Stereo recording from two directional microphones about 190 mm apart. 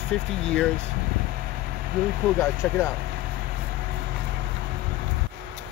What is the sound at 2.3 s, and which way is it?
Speech, 15° left (ahead or behind).